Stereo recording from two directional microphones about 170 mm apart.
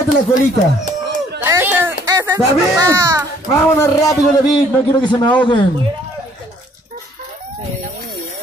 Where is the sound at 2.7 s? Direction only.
20° right (ahead or behind).